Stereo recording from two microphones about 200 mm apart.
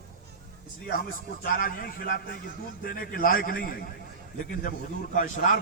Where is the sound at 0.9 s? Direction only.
45° left (ahead or behind).